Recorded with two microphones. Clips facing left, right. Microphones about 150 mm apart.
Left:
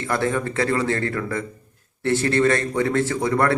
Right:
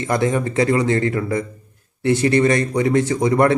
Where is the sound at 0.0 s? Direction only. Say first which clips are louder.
Right 4 dB; 15° right (ahead or behind).